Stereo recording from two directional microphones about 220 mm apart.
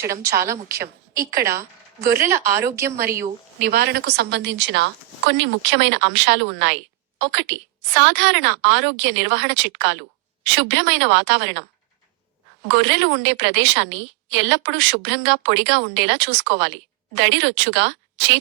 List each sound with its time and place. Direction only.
0.0 s a woman's voice: 10° right (ahead or behind)
3.6 s a woman's voice: 45° right (ahead or behind)
12.6 s a woman's voice: 55° right (ahead or behind)